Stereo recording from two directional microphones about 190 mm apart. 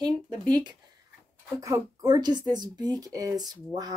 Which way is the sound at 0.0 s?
20° right (ahead or behind).